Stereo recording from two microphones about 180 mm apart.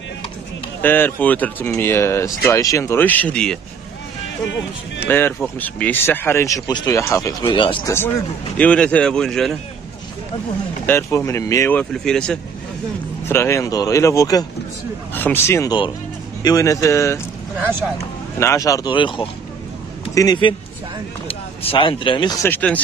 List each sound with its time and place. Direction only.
0.8 s speech: 10° left (ahead or behind)
5.0 s speech: 10° left (ahead or behind)
7.4 s speech: 25° left (ahead or behind)
8.5 s speech: 5° left (ahead or behind)
10.9 s speech: 15° left (ahead or behind)
11.9 s speech: 5° left (ahead or behind)
13.3 s speech: 15° left (ahead or behind)
18.4 s speech: 15° left (ahead or behind)
22.5 s speech: 5° left (ahead or behind)